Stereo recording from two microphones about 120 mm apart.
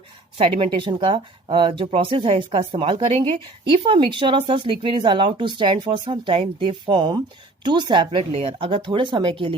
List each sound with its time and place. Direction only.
0.3 s speech: 50° right (ahead or behind)